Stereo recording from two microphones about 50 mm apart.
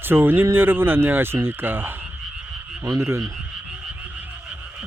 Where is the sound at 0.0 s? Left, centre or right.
Right.